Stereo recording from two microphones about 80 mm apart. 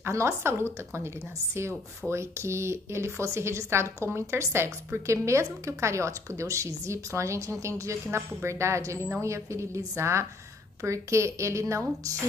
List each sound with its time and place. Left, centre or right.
0.0 s a woman's voice: right